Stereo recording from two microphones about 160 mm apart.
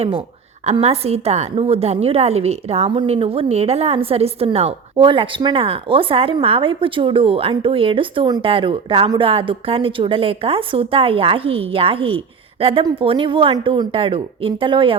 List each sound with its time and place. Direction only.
0.6 s a woman's voice: 40° right (ahead or behind)